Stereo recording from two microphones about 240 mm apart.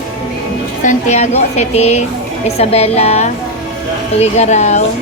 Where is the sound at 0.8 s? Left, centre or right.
Left.